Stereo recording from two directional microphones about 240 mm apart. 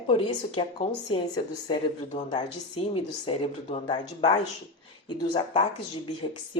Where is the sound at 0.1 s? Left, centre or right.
Left.